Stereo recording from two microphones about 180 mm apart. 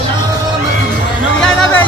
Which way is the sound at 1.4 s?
5° left (ahead or behind).